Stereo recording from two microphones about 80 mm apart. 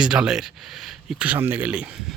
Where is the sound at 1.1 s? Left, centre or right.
Centre.